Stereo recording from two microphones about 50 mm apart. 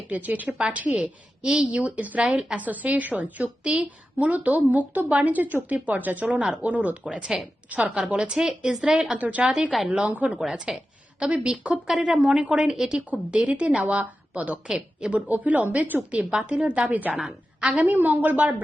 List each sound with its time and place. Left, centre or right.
0.1 s a woman's voice: right
0.4 s a woman's voice: centre
2.3 s speech: centre
2.6 s a woman's voice: right; by 9.1 s centre
9.1 s a woman's voice: right
9.4 s a woman's voice: right
10.4 s a woman's voice: centre
12.7 s speech: centre
13.3 s a woman's voice: right
14.7 s speech: centre
15.1 s a woman's voice: right
17.2 s a woman's voice: centre
17.7 s a woman's voice: right